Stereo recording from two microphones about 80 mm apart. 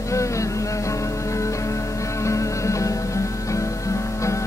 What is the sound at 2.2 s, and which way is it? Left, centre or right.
Music, left.